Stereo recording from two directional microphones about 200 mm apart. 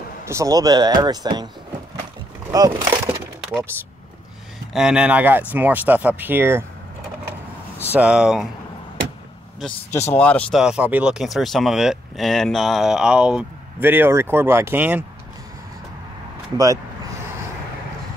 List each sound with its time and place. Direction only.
0.3 s speech: 15° right (ahead or behind)
2.5 s speech: 15° right (ahead or behind)
4.7 s speech: 5° right (ahead or behind)
7.9 s speech: 5° right (ahead or behind)
9.8 s speech: 35° left (ahead or behind)
10.1 s speech: 5° left (ahead or behind)
10.6 s speech: 5° right (ahead or behind)
16.5 s speech: 15° right (ahead or behind)